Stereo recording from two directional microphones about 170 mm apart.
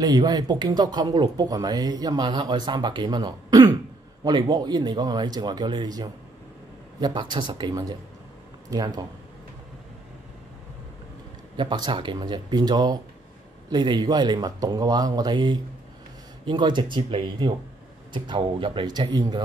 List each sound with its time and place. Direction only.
0.0 s speech: 25° right (ahead or behind)
11.5 s speech: 30° right (ahead or behind)